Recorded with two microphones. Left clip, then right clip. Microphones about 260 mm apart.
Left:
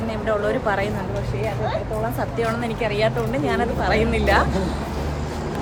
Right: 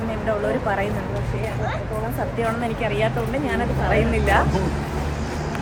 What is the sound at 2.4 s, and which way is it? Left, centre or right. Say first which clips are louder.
A woman's voice: right 1 dB; centre.